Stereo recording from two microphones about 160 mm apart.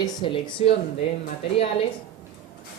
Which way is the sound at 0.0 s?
30° left (ahead or behind).